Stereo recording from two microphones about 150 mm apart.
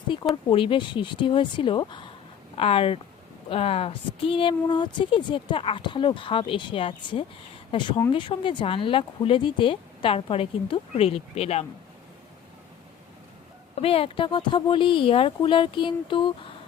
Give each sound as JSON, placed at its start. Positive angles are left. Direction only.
{"t": 0.4, "sound": "a woman's voice", "side_deg": 35}
{"t": 13.7, "sound": "a woman's voice", "side_deg": 40}